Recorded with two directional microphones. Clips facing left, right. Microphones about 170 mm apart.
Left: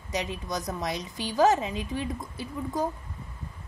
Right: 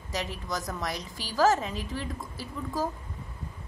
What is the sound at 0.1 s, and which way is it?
A woman's voice, 20° left (ahead or behind).